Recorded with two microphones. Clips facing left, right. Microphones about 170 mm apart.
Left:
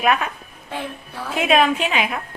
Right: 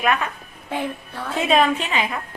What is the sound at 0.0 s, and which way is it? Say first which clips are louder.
Speech: left 2 dB; 15° left (ahead or behind).